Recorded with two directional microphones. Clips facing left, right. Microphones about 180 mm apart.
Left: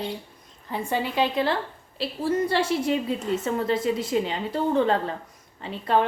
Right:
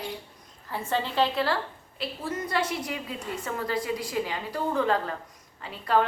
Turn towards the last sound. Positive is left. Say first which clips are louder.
# left 2 dB
turn(degrees=25)  # may be behind; listen again after turning